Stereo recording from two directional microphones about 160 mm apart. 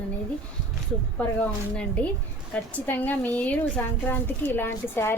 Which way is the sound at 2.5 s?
10° left (ahead or behind).